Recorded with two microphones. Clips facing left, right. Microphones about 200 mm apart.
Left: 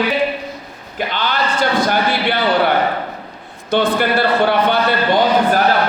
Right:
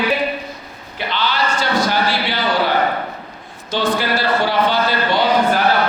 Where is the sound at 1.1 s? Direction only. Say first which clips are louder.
Right 1 dB; 50° left (ahead or behind).